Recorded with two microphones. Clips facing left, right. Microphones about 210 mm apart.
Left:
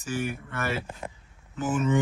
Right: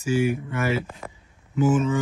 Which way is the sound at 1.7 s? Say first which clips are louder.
Right 1 dB; centre (ahead or behind).